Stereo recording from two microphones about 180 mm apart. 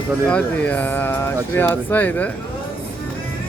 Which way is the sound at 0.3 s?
5° left (ahead or behind).